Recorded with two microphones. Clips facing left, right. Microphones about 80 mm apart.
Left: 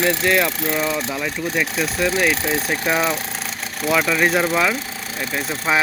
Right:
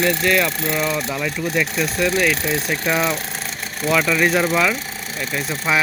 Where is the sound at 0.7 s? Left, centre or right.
Centre.